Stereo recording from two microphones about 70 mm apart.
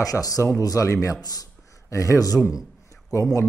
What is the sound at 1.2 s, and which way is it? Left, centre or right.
Speech, left.